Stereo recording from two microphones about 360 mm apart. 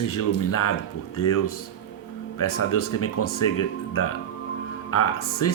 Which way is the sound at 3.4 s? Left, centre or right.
Left.